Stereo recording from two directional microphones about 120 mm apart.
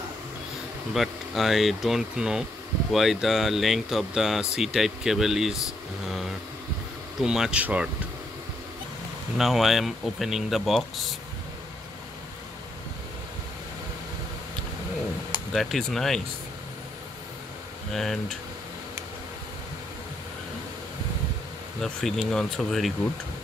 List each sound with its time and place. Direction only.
0.9 s speech: centre (ahead or behind)
6.0 s vehicle: centre (ahead or behind)
7.2 s speech: 5° right (ahead or behind)
9.4 s speech: centre (ahead or behind)
15.5 s speech: centre (ahead or behind)
17.9 s speech: 5° left (ahead or behind)
21.8 s speech: centre (ahead or behind)